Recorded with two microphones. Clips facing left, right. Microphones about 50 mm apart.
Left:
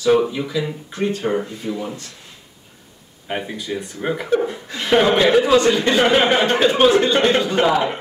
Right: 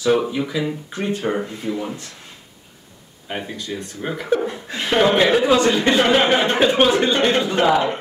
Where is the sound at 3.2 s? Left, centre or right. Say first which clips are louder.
Left 2 dB; centre.